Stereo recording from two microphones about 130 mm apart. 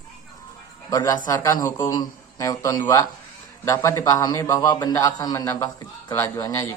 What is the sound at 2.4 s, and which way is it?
A woman's voice, 25° left (ahead or behind).